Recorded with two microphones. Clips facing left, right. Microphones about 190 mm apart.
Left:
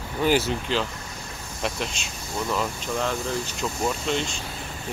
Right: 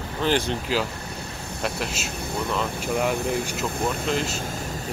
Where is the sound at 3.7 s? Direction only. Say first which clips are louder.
Left 2 dB; 55° right (ahead or behind).